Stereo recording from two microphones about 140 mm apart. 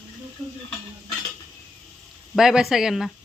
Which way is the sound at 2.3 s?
5° right (ahead or behind).